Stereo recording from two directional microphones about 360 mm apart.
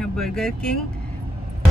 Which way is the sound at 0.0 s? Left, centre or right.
Centre.